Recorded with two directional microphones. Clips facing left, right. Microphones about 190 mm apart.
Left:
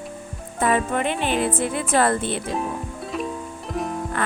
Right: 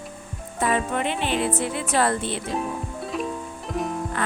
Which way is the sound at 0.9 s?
50° left (ahead or behind).